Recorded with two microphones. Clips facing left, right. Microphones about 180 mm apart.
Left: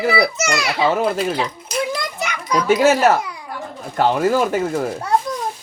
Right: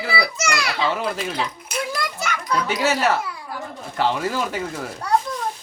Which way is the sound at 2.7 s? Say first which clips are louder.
Left 8 dB; 50° left (ahead or behind).